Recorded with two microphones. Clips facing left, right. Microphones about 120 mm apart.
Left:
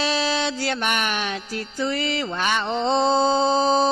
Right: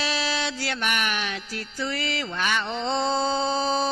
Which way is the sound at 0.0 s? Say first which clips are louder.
Left 5 dB; 25° left (ahead or behind).